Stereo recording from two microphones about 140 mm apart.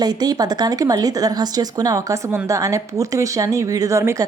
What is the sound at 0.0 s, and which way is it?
Speech, 30° right (ahead or behind).